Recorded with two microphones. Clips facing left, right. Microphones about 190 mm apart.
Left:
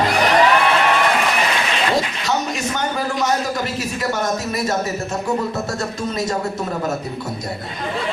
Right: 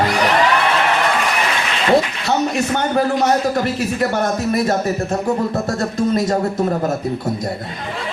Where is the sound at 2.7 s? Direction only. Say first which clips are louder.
Right 5 dB; 55° right (ahead or behind).